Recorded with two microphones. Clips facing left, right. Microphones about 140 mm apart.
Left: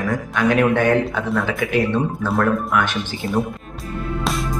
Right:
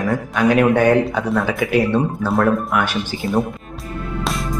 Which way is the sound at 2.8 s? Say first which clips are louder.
Right 2 dB; 5° right (ahead or behind).